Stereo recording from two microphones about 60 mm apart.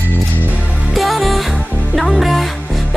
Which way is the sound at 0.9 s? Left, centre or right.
Centre.